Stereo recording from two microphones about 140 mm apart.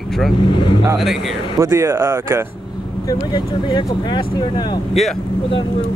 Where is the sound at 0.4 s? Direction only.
35° left (ahead or behind).